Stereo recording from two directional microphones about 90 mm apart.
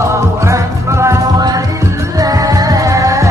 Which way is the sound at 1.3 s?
45° right (ahead or behind).